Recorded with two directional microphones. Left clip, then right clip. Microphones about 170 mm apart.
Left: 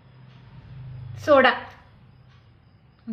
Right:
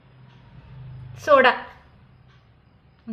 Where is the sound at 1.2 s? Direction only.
25° right (ahead or behind).